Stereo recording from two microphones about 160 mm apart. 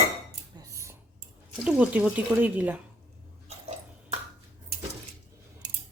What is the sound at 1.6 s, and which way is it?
Speech, 5° right (ahead or behind).